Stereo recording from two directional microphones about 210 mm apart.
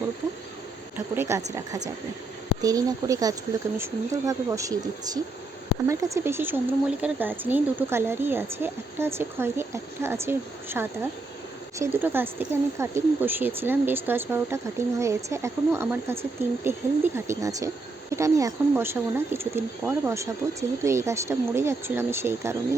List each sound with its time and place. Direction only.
0.9 s speech: 10° right (ahead or behind)
2.6 s speech: 15° right (ahead or behind)